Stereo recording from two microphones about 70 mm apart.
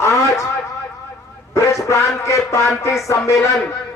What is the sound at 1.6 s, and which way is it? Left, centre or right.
A man's voice, left.